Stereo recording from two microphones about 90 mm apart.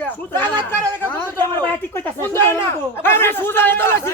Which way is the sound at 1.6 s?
20° left (ahead or behind).